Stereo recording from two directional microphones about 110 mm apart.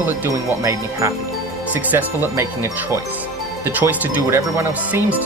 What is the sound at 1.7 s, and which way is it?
Speech, 20° right (ahead or behind).